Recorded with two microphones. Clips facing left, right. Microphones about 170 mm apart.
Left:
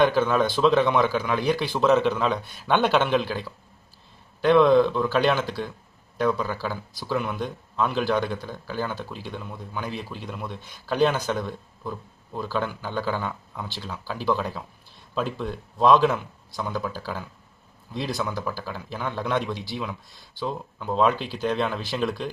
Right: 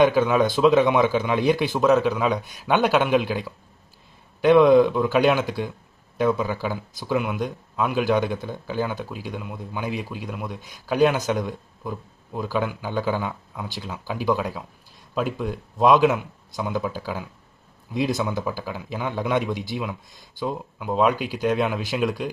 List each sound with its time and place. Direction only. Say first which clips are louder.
0.0 s a man's voice: right 2 dB; 10° right (ahead or behind)
1.9 s a man's voice: right 1 dB; 5° right (ahead or behind)